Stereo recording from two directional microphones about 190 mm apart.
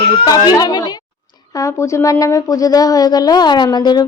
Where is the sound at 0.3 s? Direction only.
20° left (ahead or behind).